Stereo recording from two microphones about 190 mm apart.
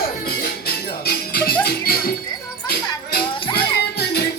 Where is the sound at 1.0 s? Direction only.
55° left (ahead or behind).